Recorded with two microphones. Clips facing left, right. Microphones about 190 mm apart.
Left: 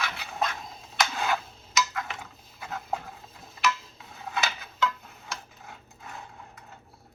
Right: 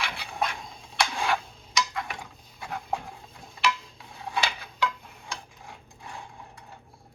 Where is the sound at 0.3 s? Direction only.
10° right (ahead or behind).